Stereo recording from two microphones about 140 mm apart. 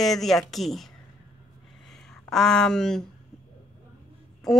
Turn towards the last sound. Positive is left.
turn(degrees=5)  # may be behind; listen again after turning